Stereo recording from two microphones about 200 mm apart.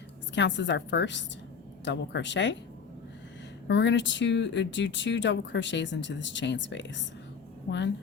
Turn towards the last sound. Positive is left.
turn(degrees=60)  # may be behind; listen again after turning